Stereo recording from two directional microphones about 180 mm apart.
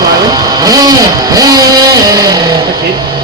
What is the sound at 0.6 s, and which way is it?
Vehicle, 20° right (ahead or behind).